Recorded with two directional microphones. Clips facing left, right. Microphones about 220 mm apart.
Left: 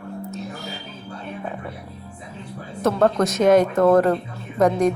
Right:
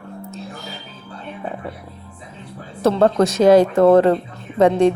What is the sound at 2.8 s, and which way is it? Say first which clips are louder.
A woman's voice: right 3 dB; 30° right (ahead or behind).